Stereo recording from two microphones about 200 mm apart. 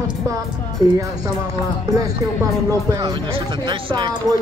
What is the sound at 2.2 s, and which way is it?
Speech, 15° right (ahead or behind).